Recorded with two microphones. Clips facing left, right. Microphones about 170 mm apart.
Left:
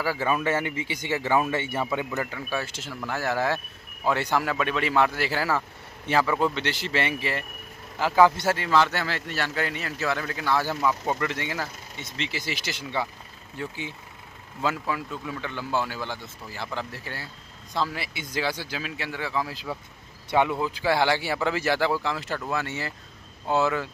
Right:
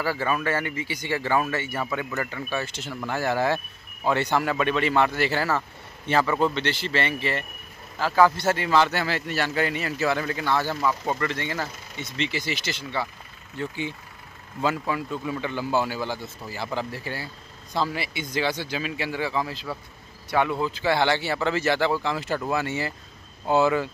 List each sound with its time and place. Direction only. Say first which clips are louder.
0.0 s speech: even; 15° left (ahead or behind)
8.5 s speech: right 1 dB; centre (ahead or behind)
13.6 s speech: right 4 dB; centre (ahead or behind)
19.5 s speech: even; 15° left (ahead or behind); by 23.9 s centre (ahead or behind)